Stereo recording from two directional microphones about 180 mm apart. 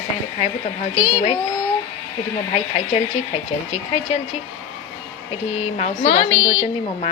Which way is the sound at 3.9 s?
35° left (ahead or behind).